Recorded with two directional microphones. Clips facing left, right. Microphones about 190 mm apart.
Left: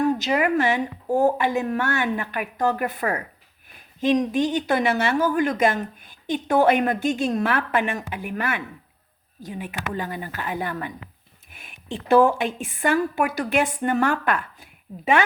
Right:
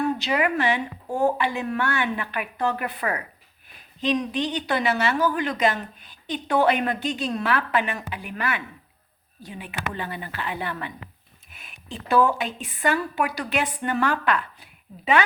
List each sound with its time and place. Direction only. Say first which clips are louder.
0.0 s speech: left 2 dB; 40° left (ahead or behind)
12.2 s speech: left 3 dB; 50° left (ahead or behind)